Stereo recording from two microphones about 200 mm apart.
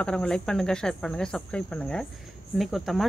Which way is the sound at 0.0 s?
5° left (ahead or behind).